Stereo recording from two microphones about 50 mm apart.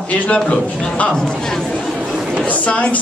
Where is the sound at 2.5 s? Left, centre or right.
Left.